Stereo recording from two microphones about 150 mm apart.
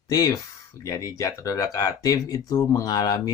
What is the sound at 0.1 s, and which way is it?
Speech, 25° left (ahead or behind).